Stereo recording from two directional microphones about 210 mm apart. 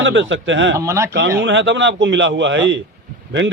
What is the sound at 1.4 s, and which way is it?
Speech, 60° right (ahead or behind).